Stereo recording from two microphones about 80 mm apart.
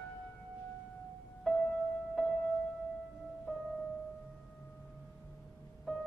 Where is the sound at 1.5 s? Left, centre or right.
Centre.